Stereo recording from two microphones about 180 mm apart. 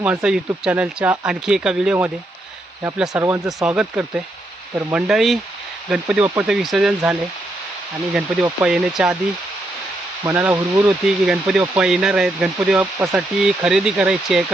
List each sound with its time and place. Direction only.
0.0 s speech: 5° right (ahead or behind)
3.1 s speech: 15° right (ahead or behind)
3.8 s speech: 5° right (ahead or behind)
5.0 s speech: centre (ahead or behind)
10.2 s speech: 15° right (ahead or behind)
11.0 s speech: centre (ahead or behind)